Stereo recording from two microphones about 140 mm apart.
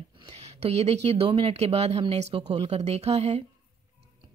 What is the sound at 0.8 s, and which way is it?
A woman's voice, 45° right (ahead or behind).